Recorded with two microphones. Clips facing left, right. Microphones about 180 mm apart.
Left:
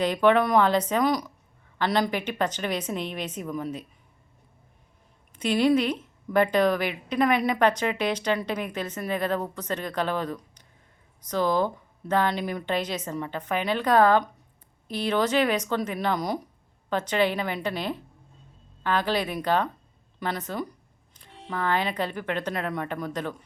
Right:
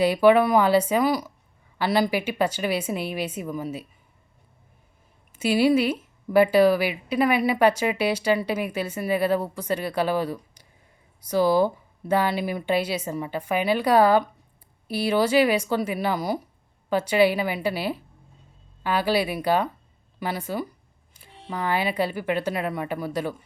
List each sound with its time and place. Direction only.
0.0 s speech: 10° right (ahead or behind)
5.4 s speech: 5° right (ahead or behind)